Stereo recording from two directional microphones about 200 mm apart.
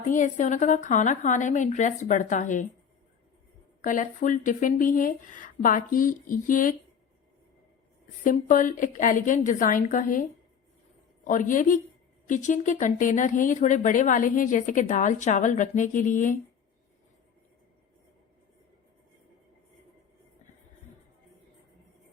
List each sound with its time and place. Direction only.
0.1 s speech: 40° left (ahead or behind)
3.8 s speech: 40° left (ahead or behind)
8.2 s speech: 40° left (ahead or behind)